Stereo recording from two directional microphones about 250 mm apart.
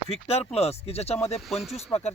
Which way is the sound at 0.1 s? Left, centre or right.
Left.